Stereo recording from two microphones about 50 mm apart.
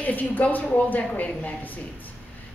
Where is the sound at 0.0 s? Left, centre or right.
Left.